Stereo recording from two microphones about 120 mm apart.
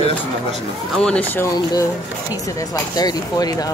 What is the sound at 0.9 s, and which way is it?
Speech, 5° left (ahead or behind).